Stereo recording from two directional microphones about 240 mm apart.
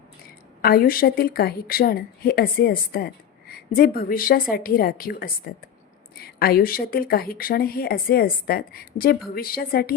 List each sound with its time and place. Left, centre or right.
0.6 s a woman's voice: left